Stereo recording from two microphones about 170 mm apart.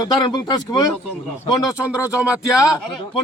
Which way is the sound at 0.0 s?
25° left (ahead or behind).